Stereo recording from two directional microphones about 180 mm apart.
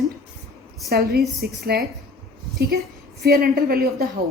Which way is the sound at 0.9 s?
60° right (ahead or behind).